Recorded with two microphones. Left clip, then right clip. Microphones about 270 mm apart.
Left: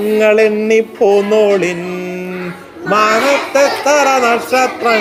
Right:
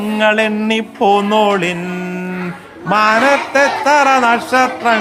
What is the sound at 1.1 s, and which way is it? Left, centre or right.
Speech, centre.